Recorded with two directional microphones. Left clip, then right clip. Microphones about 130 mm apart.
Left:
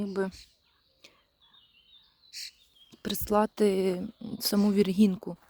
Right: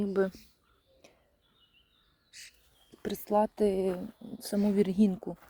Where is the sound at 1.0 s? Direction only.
30° left (ahead or behind).